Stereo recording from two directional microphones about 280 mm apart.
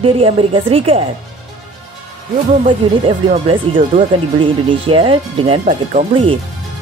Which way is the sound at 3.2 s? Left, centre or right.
Centre.